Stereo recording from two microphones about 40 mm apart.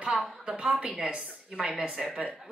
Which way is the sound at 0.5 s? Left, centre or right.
Right.